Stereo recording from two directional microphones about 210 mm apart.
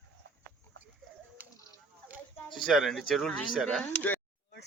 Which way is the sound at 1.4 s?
10° right (ahead or behind).